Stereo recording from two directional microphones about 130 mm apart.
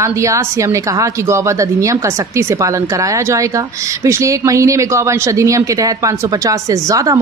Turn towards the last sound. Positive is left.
turn(degrees=-25)  # may be behind; listen again after turning